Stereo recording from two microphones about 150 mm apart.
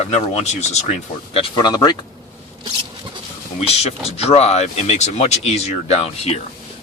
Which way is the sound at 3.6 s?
45° left (ahead or behind).